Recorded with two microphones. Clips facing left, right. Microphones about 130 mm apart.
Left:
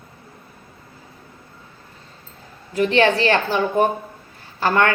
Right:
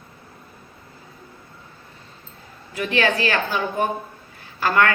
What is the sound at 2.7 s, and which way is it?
A woman's voice, 35° left (ahead or behind).